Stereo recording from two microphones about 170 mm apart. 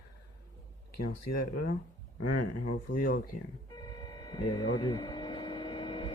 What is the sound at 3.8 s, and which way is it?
Vehicle, 25° left (ahead or behind).